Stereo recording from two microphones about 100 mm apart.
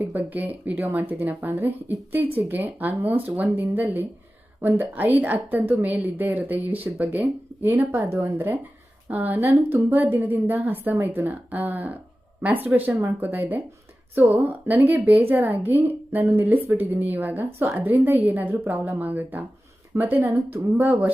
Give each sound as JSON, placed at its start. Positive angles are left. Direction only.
{"t": 0.0, "sound": "a woman's voice", "side_deg": -20}
{"t": 14.7, "sound": "a woman's voice", "side_deg": -20}